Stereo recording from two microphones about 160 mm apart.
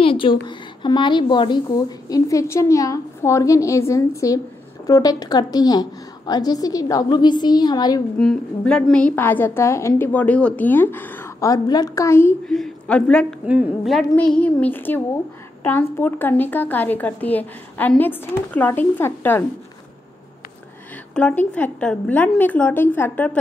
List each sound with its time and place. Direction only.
0.0 s a woman's voice: 35° left (ahead or behind)
8.2 s a woman's voice: 5° left (ahead or behind)
12.4 s a woman's voice: 5° left (ahead or behind)
13.5 s a woman's voice: 5° right (ahead or behind); by 19.4 s 15° left (ahead or behind)
21.1 s a woman's voice: 5° left (ahead or behind)